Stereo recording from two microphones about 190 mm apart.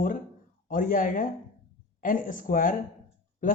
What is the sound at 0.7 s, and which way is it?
Speech, 45° left (ahead or behind).